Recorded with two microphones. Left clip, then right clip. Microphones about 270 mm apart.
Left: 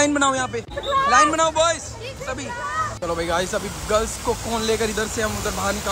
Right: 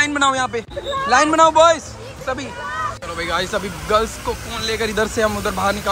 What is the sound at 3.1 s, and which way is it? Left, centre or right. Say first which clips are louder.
Speech: right 1 dB; centre.